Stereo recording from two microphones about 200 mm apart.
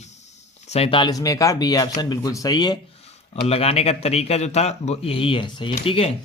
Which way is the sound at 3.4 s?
30° left (ahead or behind).